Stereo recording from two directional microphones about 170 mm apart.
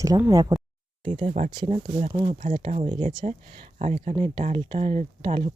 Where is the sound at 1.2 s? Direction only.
45° right (ahead or behind).